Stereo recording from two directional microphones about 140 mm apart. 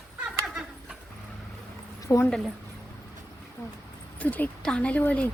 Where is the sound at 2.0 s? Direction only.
20° left (ahead or behind).